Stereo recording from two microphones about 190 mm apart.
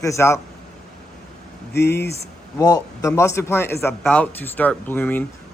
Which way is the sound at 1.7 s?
60° left (ahead or behind).